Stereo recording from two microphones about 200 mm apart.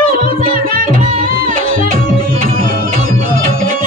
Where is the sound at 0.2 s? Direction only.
45° right (ahead or behind).